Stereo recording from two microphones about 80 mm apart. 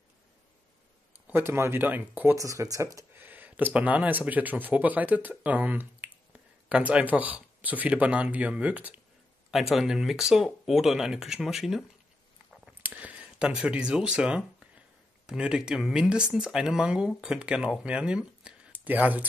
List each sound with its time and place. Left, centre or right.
1.2 s speech: right
2.3 s speech: right
3.1 s speech: right
9.5 s speech: centre
12.8 s speech: centre